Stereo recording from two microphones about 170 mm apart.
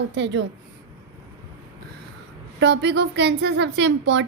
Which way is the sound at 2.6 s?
90° right.